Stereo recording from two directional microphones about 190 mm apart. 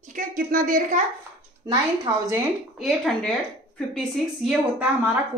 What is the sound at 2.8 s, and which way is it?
A woman's voice, centre (ahead or behind).